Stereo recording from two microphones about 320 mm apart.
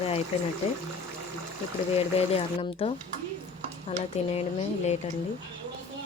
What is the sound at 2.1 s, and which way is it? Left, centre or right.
Speech, centre.